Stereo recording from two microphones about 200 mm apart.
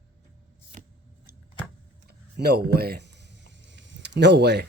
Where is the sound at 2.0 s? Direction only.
50° right (ahead or behind).